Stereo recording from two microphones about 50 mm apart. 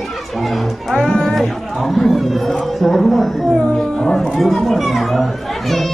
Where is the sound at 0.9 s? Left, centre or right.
Centre.